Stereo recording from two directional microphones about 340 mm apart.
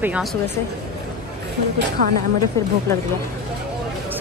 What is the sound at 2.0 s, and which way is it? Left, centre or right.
Speech, right.